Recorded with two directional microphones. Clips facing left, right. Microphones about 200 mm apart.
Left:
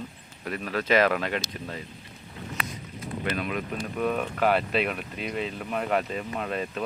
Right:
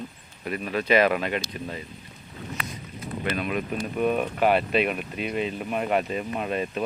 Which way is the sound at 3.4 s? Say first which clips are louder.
Right 3 dB; 15° right (ahead or behind).